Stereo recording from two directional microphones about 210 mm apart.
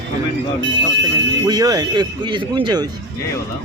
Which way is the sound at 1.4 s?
20° right (ahead or behind).